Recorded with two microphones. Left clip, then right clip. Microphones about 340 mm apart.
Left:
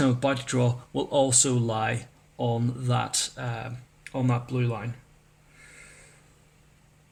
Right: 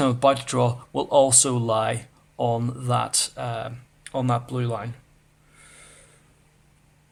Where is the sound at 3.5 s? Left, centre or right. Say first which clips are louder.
Right 6 dB; right.